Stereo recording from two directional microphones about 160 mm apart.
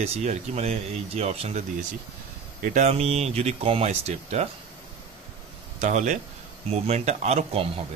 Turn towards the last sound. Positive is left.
turn(degrees=-40)  # may be behind; listen again after turning